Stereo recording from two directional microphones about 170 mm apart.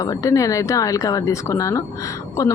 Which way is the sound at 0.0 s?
20° left (ahead or behind).